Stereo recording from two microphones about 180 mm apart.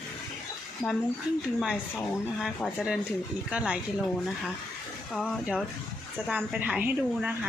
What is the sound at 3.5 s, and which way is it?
Speech, 5° right (ahead or behind).